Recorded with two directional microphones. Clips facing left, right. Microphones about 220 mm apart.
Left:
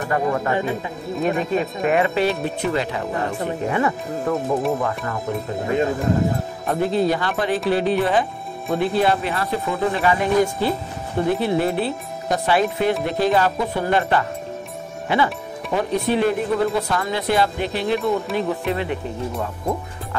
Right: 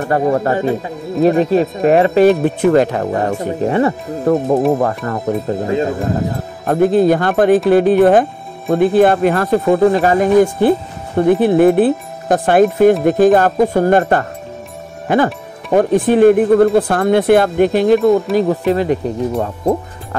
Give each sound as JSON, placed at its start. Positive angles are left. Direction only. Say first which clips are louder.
{"t": 0.1, "sound": "speech", "louder": "right 6 dB", "side_deg": -40}
{"t": 2.4, "sound": "speech", "louder": "right 11 dB", "side_deg": -50}
{"t": 4.7, "sound": "speech", "louder": "right 7 dB", "side_deg": -45}
{"t": 6.6, "sound": "speech", "louder": "right 9 dB", "side_deg": -50}